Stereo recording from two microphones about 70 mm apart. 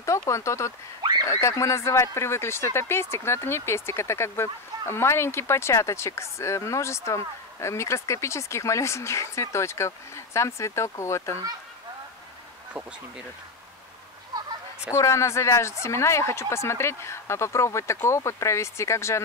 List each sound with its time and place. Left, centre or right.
0.0 s speech: left
14.9 s speech: left